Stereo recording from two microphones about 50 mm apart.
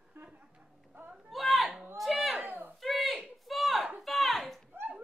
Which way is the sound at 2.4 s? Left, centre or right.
Right.